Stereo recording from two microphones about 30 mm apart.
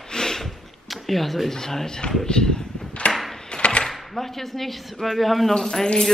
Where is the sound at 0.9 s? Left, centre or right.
Centre.